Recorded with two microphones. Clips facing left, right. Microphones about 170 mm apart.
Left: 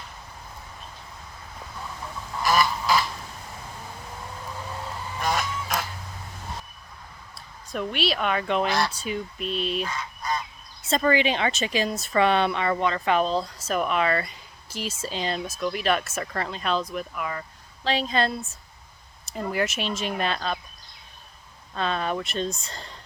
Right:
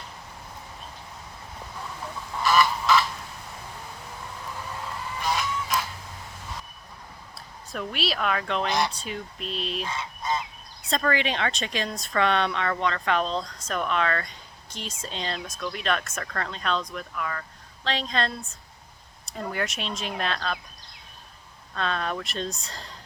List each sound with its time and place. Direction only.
2.4 s goose: 40° left (ahead or behind)
5.2 s goose: 50° left (ahead or behind)
7.3 s a woman's voice: centre (ahead or behind)
9.8 s goose: 25° right (ahead or behind)
10.8 s a woman's voice: 5° left (ahead or behind)
21.8 s a woman's voice: 5° left (ahead or behind)